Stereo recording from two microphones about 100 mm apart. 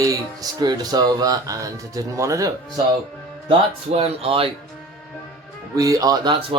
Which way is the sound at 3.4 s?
80° right.